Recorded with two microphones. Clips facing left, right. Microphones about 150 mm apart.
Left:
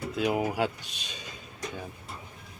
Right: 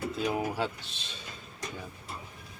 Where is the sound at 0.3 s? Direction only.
15° left (ahead or behind).